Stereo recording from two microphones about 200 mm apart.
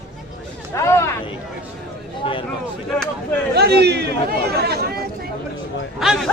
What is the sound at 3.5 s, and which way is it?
A man's voice, 55° right (ahead or behind).